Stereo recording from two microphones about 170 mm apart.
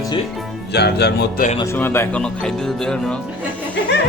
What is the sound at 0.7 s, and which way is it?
Speech, 80° left.